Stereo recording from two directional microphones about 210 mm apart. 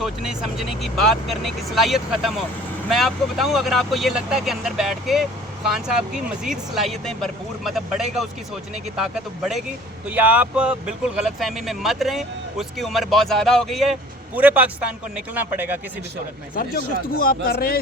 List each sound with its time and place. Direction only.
0.0 s speech: centre (ahead or behind)
6.4 s a man's voice: centre (ahead or behind)
16.6 s speech: 45° left (ahead or behind)